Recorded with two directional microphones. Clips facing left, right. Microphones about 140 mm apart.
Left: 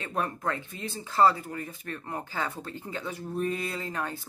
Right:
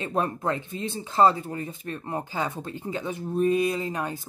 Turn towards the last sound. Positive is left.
turn(degrees=-15)  # may be behind; listen again after turning